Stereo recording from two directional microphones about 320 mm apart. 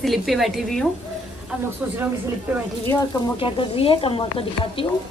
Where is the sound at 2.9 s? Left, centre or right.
Centre.